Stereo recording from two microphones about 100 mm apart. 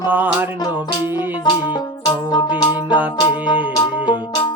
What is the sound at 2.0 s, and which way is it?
Music, 45° left (ahead or behind).